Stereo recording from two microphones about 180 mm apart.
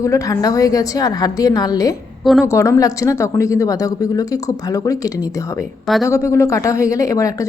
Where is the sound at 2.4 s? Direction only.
15° left (ahead or behind).